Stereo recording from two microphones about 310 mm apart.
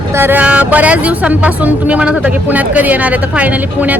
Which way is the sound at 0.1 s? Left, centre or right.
Centre.